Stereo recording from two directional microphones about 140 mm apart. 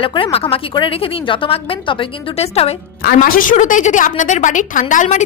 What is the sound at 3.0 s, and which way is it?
A woman's voice, 90° left.